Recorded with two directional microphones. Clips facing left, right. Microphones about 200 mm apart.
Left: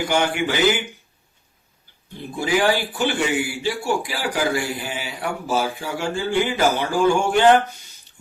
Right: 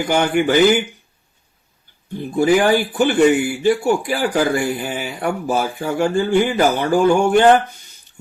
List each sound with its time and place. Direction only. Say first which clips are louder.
0.1 s speech: right 8 dB; 50° right (ahead or behind)
2.4 s speech: right 6 dB; 50° right (ahead or behind)